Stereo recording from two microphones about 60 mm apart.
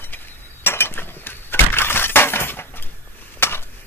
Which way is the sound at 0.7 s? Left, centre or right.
Left.